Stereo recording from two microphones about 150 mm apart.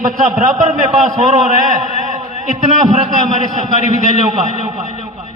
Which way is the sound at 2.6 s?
50° right (ahead or behind).